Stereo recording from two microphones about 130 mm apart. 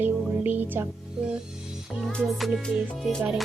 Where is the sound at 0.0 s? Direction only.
15° right (ahead or behind).